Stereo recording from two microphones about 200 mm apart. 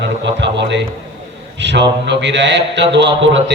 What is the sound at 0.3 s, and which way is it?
A man's voice, 60° right (ahead or behind).